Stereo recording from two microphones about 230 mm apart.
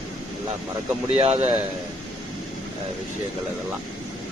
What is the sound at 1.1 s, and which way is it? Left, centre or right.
Speech, right.